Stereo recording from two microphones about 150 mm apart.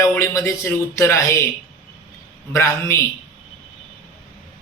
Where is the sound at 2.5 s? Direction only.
15° left (ahead or behind).